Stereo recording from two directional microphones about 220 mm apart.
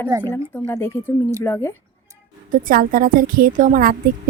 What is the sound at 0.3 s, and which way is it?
Speech, 10° left (ahead or behind).